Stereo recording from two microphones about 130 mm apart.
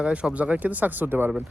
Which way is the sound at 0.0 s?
10° right (ahead or behind).